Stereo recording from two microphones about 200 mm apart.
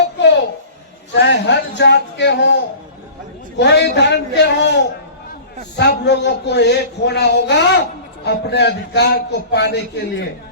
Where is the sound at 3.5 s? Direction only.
60° left (ahead or behind).